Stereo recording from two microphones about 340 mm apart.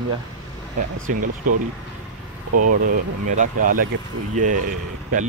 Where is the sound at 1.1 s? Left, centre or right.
Right.